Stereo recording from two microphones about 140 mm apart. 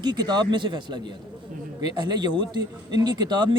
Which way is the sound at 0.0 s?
30° right (ahead or behind).